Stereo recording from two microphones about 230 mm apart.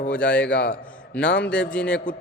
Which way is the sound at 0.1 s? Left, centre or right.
Centre.